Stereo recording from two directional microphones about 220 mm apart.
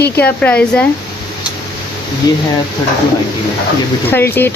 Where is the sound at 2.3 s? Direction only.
20° left (ahead or behind).